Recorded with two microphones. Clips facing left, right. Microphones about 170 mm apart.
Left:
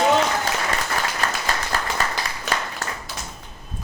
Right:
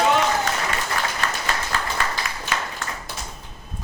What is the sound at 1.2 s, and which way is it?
Applause, 40° left (ahead or behind).